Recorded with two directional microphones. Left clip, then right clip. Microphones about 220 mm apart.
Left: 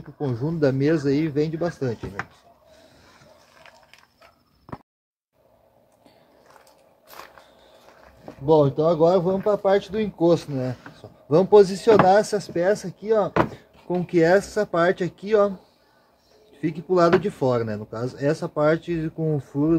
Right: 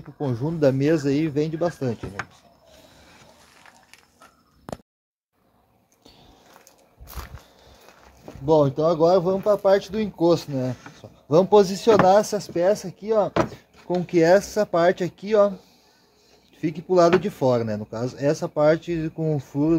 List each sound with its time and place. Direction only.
0.2 s speech: 20° right (ahead or behind)
8.5 s speech: 15° right (ahead or behind)
13.5 s a sound: 15° right (ahead or behind)
14.0 s speech: 20° right (ahead or behind)
16.6 s speech: 20° right (ahead or behind)